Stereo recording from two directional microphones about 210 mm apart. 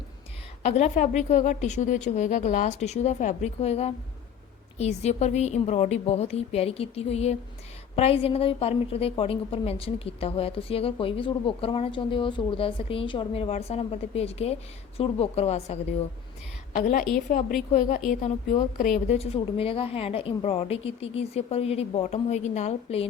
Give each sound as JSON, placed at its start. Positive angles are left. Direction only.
{"t": 0.6, "sound": "a woman's voice", "side_deg": 30}
{"t": 18.9, "sound": "a woman's voice", "side_deg": 30}